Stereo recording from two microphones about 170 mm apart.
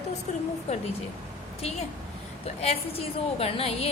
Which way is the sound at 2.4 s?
35° left (ahead or behind).